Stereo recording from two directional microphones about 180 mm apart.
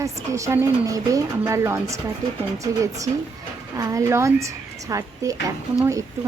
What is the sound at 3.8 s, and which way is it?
A woman's voice, 15° right (ahead or behind).